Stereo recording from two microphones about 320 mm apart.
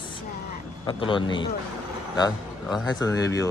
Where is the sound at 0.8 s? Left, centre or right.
Centre.